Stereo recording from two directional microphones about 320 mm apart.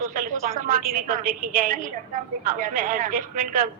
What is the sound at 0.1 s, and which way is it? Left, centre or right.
A woman's voice, right.